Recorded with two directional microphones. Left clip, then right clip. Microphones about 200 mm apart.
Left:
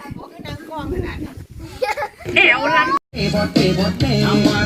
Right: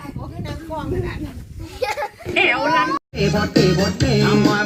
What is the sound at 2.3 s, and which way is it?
Children playing, 20° left (ahead or behind).